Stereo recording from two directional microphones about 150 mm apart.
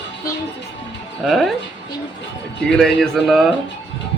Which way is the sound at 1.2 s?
Centre (ahead or behind).